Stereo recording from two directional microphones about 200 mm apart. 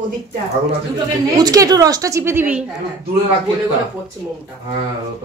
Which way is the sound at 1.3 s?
20° right (ahead or behind).